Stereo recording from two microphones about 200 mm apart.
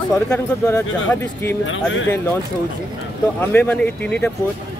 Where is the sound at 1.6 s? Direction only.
75° left (ahead or behind).